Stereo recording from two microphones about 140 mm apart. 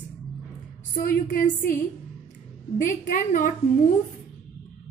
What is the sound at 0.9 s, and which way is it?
Speech, 75° left (ahead or behind).